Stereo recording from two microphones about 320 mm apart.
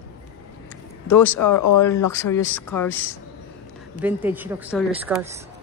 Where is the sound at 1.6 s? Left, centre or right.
Left.